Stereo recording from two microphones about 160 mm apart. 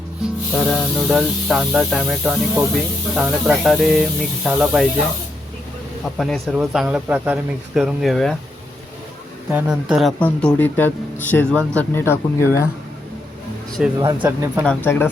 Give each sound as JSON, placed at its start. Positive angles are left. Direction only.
{"t": 0.7, "sound": "speech", "side_deg": 0}
{"t": 6.1, "sound": "speech", "side_deg": 0}
{"t": 9.5, "sound": "speech", "side_deg": -10}
{"t": 13.8, "sound": "speech", "side_deg": -5}
{"t": 14.6, "sound": "speech", "side_deg": 10}